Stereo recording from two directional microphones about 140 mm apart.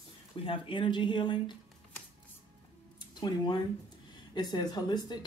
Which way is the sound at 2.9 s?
30° left (ahead or behind).